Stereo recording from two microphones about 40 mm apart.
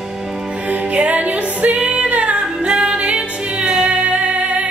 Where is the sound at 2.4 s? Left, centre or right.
Right.